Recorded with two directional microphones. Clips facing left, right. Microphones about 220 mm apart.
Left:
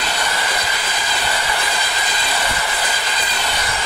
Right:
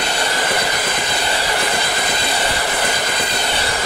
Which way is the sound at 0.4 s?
50° right (ahead or behind).